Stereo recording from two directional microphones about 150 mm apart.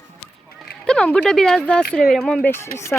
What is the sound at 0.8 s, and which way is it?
Speech, 5° left (ahead or behind).